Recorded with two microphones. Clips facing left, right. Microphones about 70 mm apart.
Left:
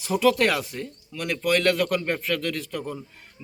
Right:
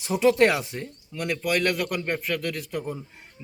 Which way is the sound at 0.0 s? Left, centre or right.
Right.